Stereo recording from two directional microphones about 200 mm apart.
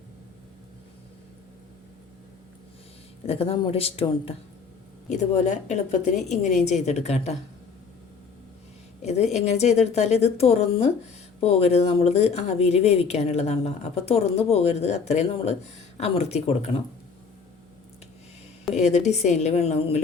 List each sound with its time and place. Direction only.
3.2 s speech: 30° left (ahead or behind)
9.0 s a sound: 35° left (ahead or behind)
9.3 s speech: 35° left (ahead or behind)
18.8 s speech: 35° left (ahead or behind)